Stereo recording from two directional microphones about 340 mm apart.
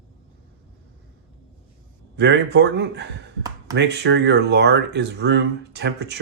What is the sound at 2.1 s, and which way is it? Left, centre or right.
A man's voice, right.